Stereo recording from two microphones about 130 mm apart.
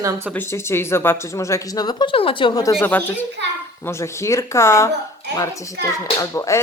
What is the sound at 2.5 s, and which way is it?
Speech, 25° left (ahead or behind).